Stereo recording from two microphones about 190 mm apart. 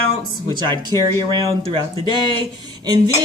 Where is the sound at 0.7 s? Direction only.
25° right (ahead or behind).